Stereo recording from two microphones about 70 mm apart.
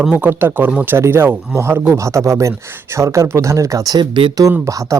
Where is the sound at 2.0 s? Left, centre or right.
Right.